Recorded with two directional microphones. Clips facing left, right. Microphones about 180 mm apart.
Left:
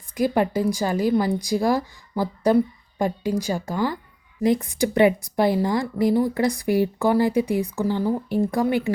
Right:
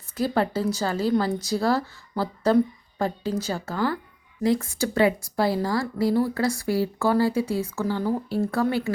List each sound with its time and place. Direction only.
0.1 s a woman's voice: 15° left (ahead or behind)